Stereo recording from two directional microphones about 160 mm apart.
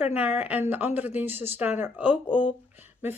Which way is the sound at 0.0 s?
10° right (ahead or behind).